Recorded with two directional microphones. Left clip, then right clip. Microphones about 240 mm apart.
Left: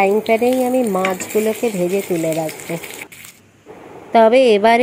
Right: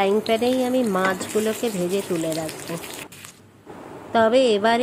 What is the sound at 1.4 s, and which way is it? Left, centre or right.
Speech, centre.